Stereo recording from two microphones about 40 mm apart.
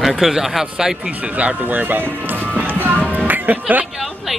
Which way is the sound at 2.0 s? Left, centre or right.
Right.